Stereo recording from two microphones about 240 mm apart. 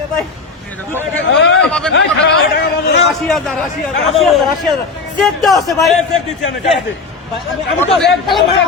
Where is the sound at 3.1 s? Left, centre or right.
Centre.